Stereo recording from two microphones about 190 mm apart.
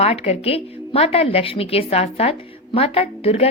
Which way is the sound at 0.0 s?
30° left (ahead or behind).